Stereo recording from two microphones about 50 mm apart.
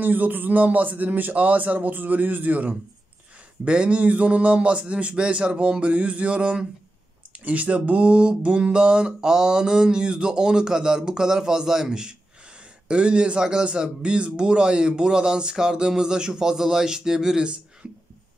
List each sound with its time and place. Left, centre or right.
0.0 s a man's voice: right
3.6 s a man's voice: right